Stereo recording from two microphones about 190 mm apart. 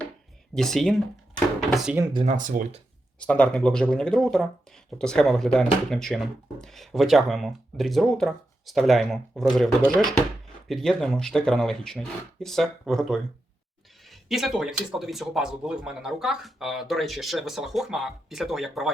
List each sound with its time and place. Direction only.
0.5 s speech: centre (ahead or behind)
2.2 s speech: 45° right (ahead or behind)
3.2 s speech: 5° left (ahead or behind)